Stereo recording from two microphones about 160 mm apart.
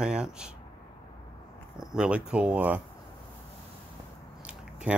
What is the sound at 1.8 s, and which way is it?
Speech, 5° right (ahead or behind).